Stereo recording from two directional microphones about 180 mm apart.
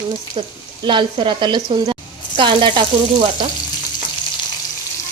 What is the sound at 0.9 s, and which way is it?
A woman's voice, 25° right (ahead or behind).